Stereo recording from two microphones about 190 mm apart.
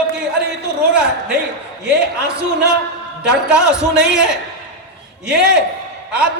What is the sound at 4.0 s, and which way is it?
Speech, 5° right (ahead or behind).